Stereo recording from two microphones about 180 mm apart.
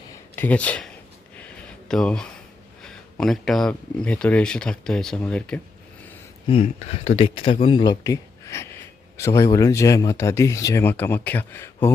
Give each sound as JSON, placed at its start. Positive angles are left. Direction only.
{"t": 0.3, "sound": "speech", "side_deg": 10}
{"t": 1.9, "sound": "speech", "side_deg": 5}
{"t": 6.5, "sound": "speech", "side_deg": 35}